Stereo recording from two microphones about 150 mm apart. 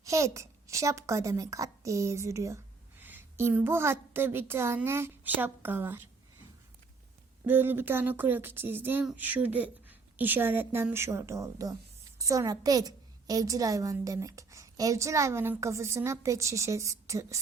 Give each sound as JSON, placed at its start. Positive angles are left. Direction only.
{"t": 0.0, "sound": "a woman's voice", "side_deg": -20}
{"t": 7.4, "sound": "a woman's voice", "side_deg": -15}